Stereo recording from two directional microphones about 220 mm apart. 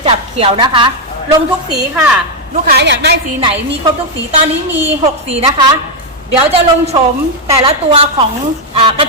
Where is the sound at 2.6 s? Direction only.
50° right (ahead or behind).